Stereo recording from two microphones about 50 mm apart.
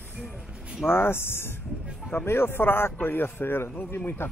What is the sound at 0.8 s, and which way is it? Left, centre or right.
A man's voice, left.